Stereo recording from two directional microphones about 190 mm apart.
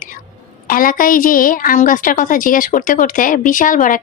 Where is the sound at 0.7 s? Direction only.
45° left (ahead or behind).